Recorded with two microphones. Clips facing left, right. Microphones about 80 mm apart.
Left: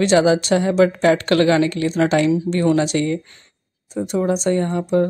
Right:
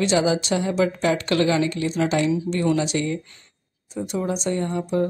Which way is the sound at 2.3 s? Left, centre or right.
Left.